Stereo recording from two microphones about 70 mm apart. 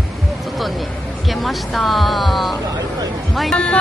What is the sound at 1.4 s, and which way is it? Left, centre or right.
Speech, centre.